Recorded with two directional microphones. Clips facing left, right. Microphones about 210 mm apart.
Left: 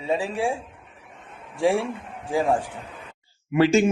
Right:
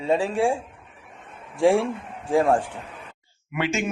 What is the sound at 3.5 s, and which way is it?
Speech, 35° left (ahead or behind).